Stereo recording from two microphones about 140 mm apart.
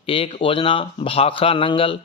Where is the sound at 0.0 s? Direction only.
40° left (ahead or behind).